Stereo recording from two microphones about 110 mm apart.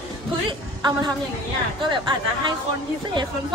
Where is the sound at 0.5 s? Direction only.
40° right (ahead or behind).